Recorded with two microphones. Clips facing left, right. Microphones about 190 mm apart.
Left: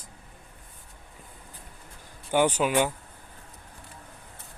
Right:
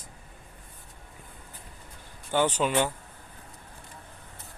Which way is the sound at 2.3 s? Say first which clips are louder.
Left 2 dB; 10° left (ahead or behind).